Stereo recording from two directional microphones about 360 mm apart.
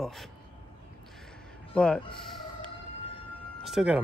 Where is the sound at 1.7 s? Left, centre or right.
Centre.